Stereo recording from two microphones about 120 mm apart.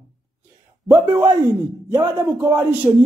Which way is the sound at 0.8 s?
20° right (ahead or behind).